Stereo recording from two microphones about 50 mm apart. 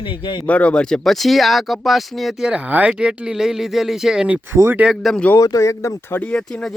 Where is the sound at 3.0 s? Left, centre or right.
Centre.